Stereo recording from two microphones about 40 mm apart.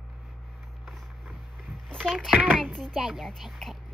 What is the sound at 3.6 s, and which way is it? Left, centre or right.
Speech, centre.